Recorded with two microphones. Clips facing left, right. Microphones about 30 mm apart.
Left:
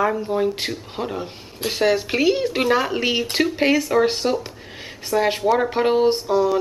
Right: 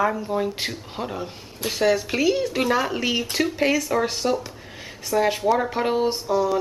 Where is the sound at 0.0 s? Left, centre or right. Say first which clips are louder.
Left 3 dB; centre.